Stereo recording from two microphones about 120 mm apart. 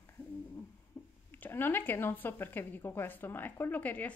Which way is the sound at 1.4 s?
15° left (ahead or behind).